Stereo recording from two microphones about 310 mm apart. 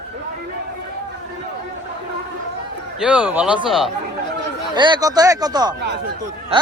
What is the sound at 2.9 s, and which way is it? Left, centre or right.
Speech, centre.